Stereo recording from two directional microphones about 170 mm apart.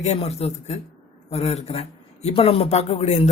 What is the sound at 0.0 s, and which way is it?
Speech, 40° left (ahead or behind).